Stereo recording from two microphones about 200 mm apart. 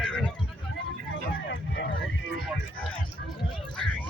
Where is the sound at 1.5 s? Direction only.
55° left (ahead or behind).